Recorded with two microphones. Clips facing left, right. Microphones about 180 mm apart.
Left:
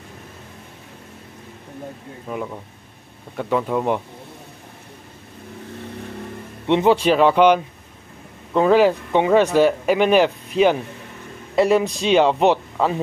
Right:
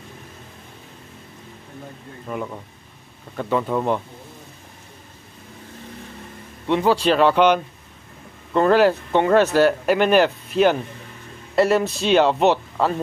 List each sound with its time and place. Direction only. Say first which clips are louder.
2.3 s speech: left 1 dB; 5° left (ahead or behind)
6.7 s speech: left 3 dB; 20° left (ahead or behind)
7.0 s speech: left 1 dB; 5° left (ahead or behind)